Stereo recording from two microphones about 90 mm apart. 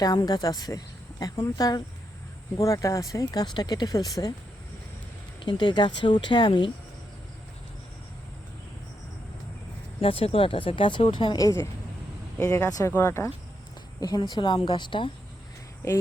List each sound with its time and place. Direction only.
0.0 s speech: 50° left (ahead or behind)
3.4 s speech: 50° left (ahead or behind)
5.4 s speech: 60° left (ahead or behind)
10.0 s speech: 90° left; by 11.3 s 65° left (ahead or behind)
11.3 s speech: 35° left (ahead or behind)
14.2 s speech: 55° left (ahead or behind)
15.8 s speech: 30° left (ahead or behind)